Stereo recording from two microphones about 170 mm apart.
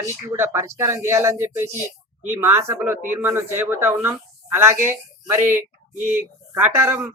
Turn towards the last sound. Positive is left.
turn(degrees=-15)  # may be behind; listen again after turning